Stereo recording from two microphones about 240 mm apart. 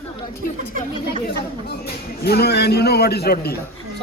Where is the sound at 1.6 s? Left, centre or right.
Left.